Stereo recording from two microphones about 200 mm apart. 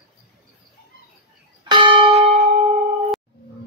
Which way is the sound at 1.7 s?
25° right (ahead or behind).